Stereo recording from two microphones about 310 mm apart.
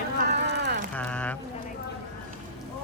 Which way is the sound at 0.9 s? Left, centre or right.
Centre.